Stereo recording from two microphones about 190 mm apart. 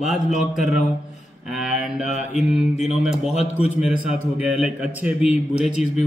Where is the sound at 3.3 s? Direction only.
35° left (ahead or behind).